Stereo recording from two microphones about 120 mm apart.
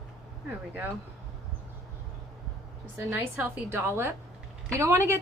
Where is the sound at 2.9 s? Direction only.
20° right (ahead or behind).